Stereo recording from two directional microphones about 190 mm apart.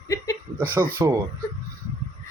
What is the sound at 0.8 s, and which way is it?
Speech, 15° right (ahead or behind).